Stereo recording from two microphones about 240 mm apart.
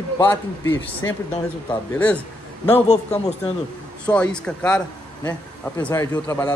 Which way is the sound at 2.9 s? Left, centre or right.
Left.